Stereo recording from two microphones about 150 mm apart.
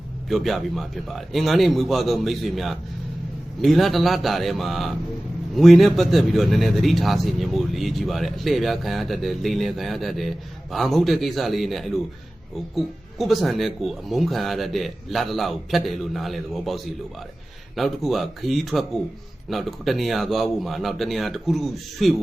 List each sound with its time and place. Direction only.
0.3 s a man's voice: centre (ahead or behind)